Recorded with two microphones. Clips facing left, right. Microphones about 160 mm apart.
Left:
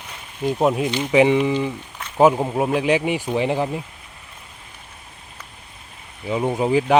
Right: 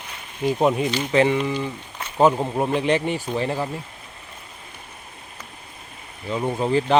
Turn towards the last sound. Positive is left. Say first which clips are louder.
# left 2 dB
turn(degrees=10)  # may be behind; listen again after turning